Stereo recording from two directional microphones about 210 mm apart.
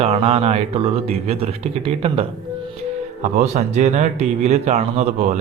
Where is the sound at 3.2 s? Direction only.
35° right (ahead or behind).